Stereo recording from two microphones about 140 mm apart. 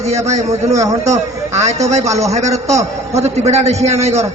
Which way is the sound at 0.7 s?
25° right (ahead or behind).